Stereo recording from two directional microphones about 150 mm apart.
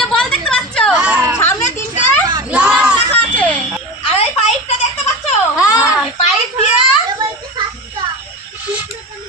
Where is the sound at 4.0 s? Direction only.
40° left (ahead or behind).